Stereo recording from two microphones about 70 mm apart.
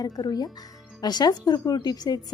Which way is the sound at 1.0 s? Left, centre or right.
Left.